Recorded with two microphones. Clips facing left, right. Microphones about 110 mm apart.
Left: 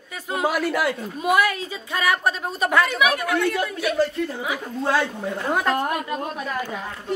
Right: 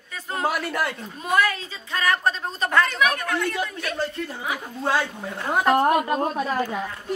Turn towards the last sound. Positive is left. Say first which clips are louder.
# right 4 dB
turn(degrees=-40)  # may be behind; listen again after turning